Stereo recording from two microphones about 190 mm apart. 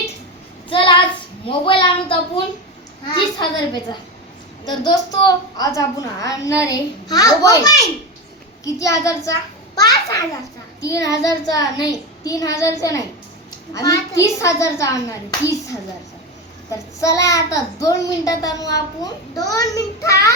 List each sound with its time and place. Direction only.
0.7 s child singing: 25° left (ahead or behind)
1.5 s a woman's voice: 25° left (ahead or behind)
16.7 s a child's voice: 15° left (ahead or behind)